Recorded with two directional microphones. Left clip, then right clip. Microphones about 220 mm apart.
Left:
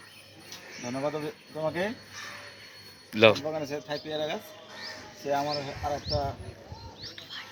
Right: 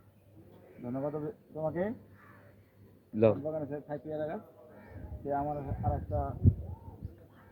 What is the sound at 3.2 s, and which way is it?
Speech, 5° left (ahead or behind).